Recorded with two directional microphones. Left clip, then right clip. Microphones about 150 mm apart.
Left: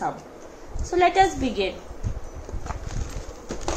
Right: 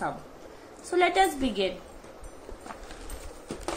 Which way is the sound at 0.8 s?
40° right (ahead or behind).